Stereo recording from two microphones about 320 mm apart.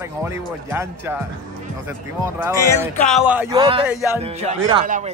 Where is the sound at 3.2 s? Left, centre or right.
Centre.